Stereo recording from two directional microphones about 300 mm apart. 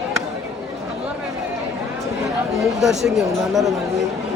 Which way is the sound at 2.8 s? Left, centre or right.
Centre.